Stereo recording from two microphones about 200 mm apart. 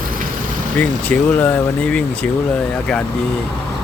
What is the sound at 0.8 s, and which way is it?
Speech, 5° left (ahead or behind).